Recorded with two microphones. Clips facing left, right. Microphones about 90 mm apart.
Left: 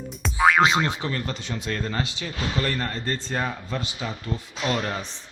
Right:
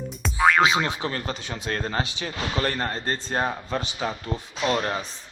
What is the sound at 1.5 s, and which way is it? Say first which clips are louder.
Speech: even; 45° right (ahead or behind).